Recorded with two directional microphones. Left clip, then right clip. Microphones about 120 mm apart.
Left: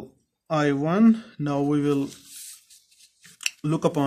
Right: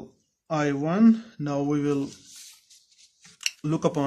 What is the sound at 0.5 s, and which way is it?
Speech, 35° left (ahead or behind).